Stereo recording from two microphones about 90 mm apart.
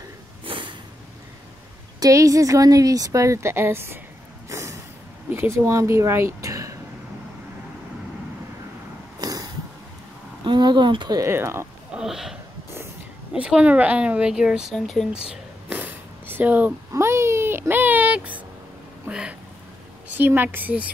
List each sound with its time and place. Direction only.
0.5 s snort: 70° right (ahead or behind)
2.0 s speech: 40° right (ahead or behind)
4.5 s snort: 35° right (ahead or behind)
5.3 s speech: 30° right (ahead or behind)
9.2 s a sound: 45° right (ahead or behind)
11.1 s speech: 30° right (ahead or behind)
11.9 s speech: 5° right (ahead or behind)
15.2 s a sound: 15° right (ahead or behind)
16.9 s speech: 35° right (ahead or behind)